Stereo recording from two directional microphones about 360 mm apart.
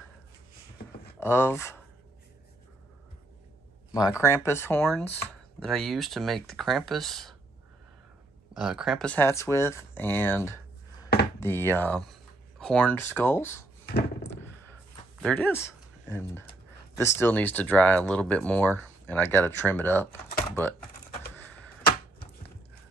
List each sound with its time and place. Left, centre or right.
1.2 s speech: centre
3.9 s speech: centre
8.5 s speech: centre
13.8 s a sound: left
15.1 s speech: centre